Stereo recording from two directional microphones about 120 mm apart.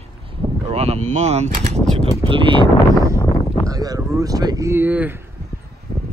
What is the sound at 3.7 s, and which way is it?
Speech, 30° right (ahead or behind).